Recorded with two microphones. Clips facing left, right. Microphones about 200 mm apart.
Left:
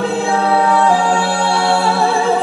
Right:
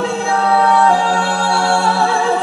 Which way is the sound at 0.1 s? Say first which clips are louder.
Left 1 dB; centre (ahead or behind).